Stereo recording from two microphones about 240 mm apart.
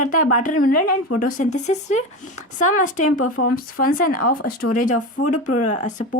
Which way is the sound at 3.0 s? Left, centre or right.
Left.